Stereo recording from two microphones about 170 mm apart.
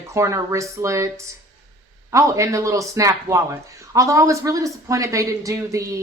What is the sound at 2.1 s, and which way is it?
A man's voice, 20° right (ahead or behind).